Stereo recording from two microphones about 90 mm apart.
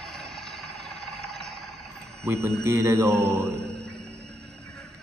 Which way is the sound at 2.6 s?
30° right (ahead or behind).